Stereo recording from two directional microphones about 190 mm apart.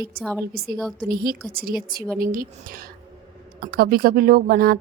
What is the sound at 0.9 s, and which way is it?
A woman's voice, 50° right (ahead or behind).